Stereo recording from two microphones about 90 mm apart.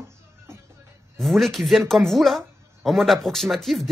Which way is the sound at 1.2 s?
Centre (ahead or behind).